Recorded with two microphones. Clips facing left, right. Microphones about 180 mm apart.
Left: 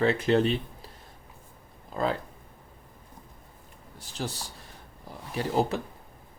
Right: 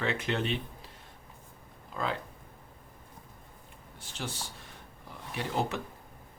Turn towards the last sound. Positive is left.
turn(degrees=35)  # may be behind; listen again after turning